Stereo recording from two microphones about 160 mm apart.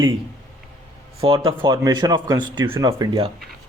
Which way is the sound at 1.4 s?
30° right (ahead or behind).